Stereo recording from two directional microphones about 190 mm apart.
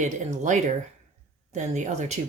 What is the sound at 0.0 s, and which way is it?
Speech, 40° right (ahead or behind).